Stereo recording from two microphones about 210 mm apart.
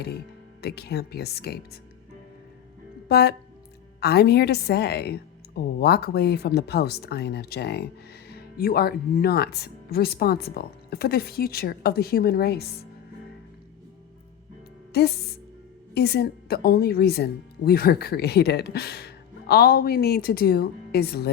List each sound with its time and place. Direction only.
0.6 s a woman's voice: 50° left (ahead or behind)
3.1 s a woman's voice: 50° left (ahead or behind)
14.9 s a woman's voice: 50° left (ahead or behind)